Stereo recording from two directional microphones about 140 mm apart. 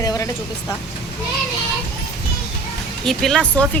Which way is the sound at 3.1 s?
5° left (ahead or behind).